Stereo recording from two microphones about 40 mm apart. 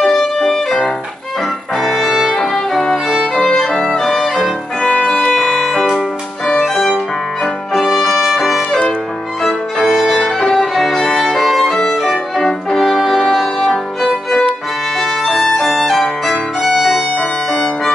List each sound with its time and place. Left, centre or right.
0.0 s music: centre
1.8 s music: centre
4.9 s music: left
5.3 s music: centre
9.4 s music: centre
9.8 s violin: centre
12.7 s brass instrument: centre
15.0 s violin: centre
17.2 s music: centre